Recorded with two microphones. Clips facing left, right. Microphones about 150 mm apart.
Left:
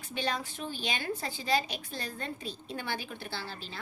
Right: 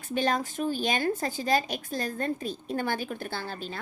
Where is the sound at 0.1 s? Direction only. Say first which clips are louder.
Right 7 dB; 45° right (ahead or behind).